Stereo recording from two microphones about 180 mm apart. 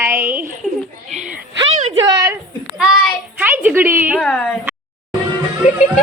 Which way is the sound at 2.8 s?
5° right (ahead or behind).